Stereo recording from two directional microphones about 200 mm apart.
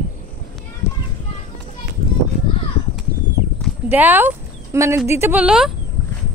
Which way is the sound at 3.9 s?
10° right (ahead or behind).